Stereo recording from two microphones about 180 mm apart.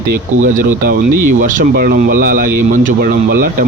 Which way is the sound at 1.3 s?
45° right (ahead or behind).